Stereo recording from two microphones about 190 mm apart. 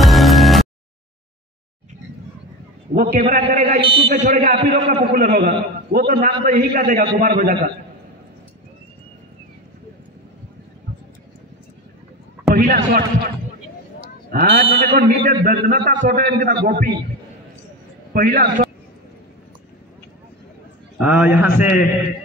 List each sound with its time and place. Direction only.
0.0 s music: centre (ahead or behind)
3.0 s a man's voice: 55° right (ahead or behind)
3.5 s a man's voice: 45° right (ahead or behind)
3.8 s speech: 25° right (ahead or behind)
4.1 s a man's voice: 45° right (ahead or behind)
12.5 s a sound: 50° right (ahead or behind)
14.0 s a man's voice: 55° right (ahead or behind)
18.1 s a man's voice: 50° right (ahead or behind)
21.0 s a man's voice: 5° right (ahead or behind)